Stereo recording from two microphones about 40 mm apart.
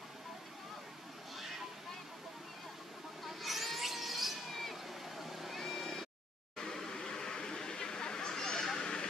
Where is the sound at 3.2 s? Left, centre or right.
Centre.